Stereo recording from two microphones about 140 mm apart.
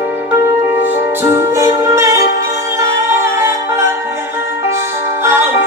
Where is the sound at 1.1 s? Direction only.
20° right (ahead or behind).